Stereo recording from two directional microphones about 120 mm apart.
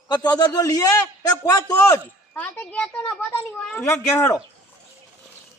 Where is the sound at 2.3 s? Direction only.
10° left (ahead or behind).